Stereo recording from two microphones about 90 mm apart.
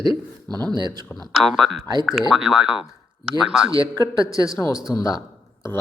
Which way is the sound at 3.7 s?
40° left (ahead or behind).